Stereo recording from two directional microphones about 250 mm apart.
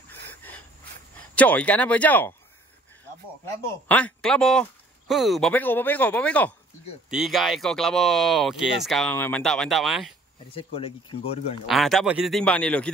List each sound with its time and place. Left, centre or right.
0.3 s gasp: centre
1.1 s speech: centre
3.6 s speech: centre
10.5 s speech: left
11.6 s speech: centre